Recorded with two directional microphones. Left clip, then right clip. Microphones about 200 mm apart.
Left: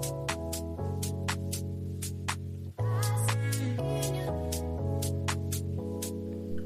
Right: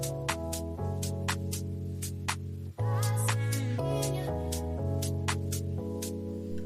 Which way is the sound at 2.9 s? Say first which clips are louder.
Even; centre (ahead or behind).